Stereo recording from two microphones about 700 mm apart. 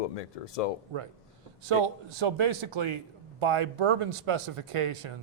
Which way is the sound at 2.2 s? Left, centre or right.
Right.